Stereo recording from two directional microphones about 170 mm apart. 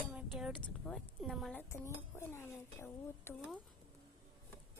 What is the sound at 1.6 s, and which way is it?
Speech, 15° left (ahead or behind).